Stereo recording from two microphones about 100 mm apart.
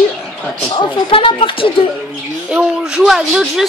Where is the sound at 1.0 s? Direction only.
60° left (ahead or behind).